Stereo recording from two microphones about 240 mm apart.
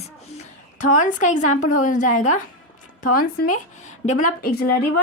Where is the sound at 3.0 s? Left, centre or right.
Left.